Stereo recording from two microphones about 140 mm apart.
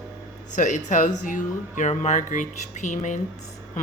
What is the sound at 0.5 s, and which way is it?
Speech, 60° left (ahead or behind).